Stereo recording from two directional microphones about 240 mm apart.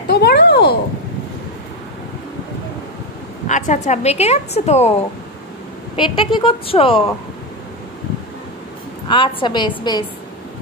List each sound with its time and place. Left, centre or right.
0.1 s a sound: left
3.4 s a woman's voice: left
5.9 s a woman's voice: centre
9.1 s a woman's voice: centre